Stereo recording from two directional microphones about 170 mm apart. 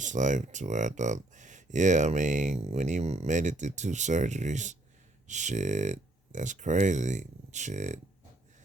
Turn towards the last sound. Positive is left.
turn(degrees=-45)  # may be behind; listen again after turning